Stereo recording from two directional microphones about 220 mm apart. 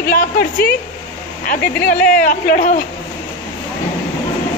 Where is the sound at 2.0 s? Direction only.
5° left (ahead or behind).